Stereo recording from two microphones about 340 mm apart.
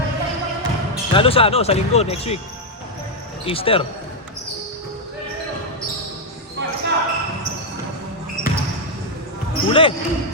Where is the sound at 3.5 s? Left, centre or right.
Centre.